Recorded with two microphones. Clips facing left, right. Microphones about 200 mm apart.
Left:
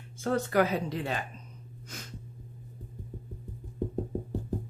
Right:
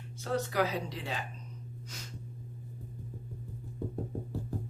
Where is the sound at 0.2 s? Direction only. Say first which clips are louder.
Left 5 dB; 50° left (ahead or behind).